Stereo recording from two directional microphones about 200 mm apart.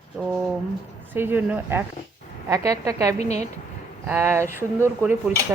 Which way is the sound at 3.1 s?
35° left (ahead or behind).